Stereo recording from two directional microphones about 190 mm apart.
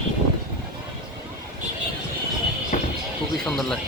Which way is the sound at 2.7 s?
40° left (ahead or behind).